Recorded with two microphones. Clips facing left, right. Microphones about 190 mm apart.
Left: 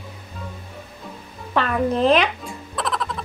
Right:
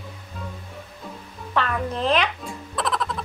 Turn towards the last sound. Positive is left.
turn(degrees=0)  # may be behind; listen again after turning